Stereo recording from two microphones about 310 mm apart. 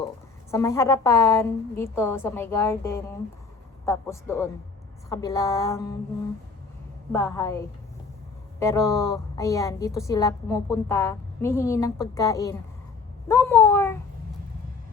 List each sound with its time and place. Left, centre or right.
0.5 s a woman's voice: centre
7.1 s a woman's voice: centre